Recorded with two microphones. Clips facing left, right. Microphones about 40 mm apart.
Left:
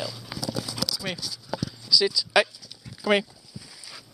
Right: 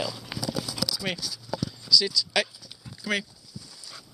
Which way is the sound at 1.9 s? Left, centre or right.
Centre.